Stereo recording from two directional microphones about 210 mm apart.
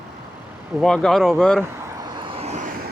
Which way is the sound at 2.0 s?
25° right (ahead or behind).